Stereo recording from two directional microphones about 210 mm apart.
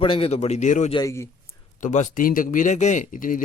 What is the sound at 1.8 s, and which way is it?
Speech, 35° left (ahead or behind).